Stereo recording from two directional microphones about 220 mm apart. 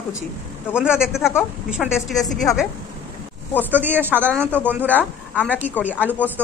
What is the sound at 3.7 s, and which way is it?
Speech, 10° right (ahead or behind).